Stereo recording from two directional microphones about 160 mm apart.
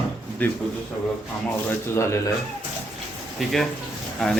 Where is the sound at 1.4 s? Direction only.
15° left (ahead or behind).